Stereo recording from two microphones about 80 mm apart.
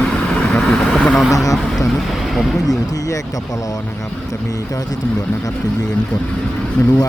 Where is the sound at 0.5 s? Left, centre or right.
Centre.